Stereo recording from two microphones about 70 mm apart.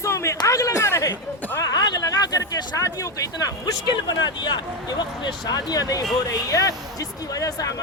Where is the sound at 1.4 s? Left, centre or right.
Left.